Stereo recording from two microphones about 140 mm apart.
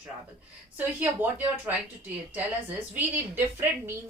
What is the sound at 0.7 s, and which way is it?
Speech, 10° right (ahead or behind).